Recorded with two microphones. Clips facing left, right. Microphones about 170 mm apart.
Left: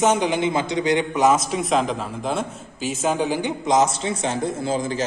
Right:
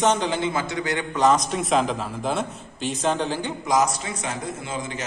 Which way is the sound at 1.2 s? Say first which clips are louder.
Right 2 dB; 5° left (ahead or behind).